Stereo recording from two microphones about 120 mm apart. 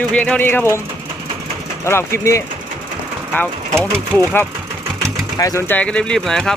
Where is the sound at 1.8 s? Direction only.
20° left (ahead or behind).